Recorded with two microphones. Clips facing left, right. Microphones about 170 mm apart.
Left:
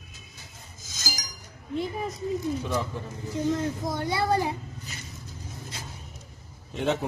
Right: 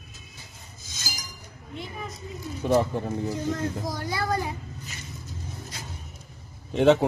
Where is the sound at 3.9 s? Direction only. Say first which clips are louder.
Left 3 dB; 25° left (ahead or behind).